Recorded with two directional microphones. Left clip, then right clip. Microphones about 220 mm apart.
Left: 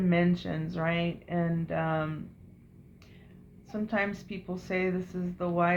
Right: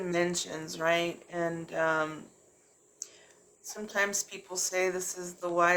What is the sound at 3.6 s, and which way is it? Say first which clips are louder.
A woman's voice: even; 25° right (ahead or behind).